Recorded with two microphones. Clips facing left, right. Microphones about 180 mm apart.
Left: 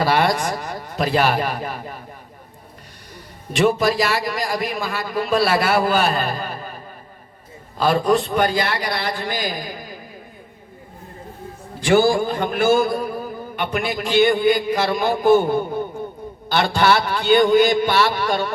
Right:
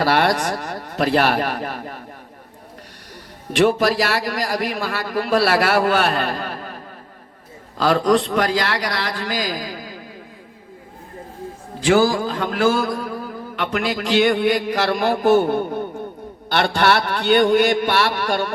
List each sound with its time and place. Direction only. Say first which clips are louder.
0.0 s a man's voice: right 1 dB; 70° right (ahead or behind)
3.5 s a man's voice: right 1 dB; 70° right (ahead or behind)
7.8 s mantra: right 1 dB; 90° right
11.9 s mantra: left 4 dB; 90° right; by 15.5 s 75° right (ahead or behind)
16.5 s a man's voice: even; 65° right (ahead or behind)